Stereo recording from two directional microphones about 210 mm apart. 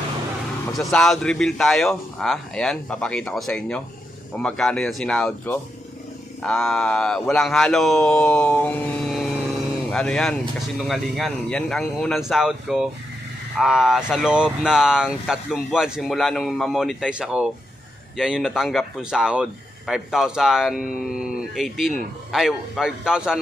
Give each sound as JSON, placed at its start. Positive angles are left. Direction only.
{"t": 0.7, "sound": "speech", "side_deg": 0}